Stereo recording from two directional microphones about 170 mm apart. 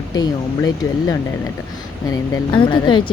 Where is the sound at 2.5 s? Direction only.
30° left (ahead or behind).